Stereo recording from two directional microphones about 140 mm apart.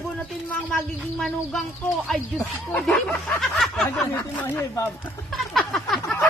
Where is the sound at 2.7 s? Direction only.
5° left (ahead or behind).